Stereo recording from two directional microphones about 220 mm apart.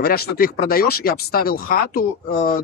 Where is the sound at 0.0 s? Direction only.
45° left (ahead or behind).